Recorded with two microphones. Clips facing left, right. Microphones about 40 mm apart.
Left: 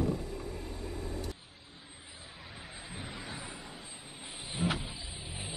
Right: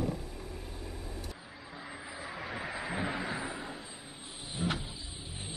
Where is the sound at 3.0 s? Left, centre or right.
Right.